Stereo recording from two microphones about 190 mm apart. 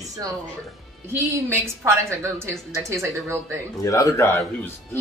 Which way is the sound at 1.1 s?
10° right (ahead or behind).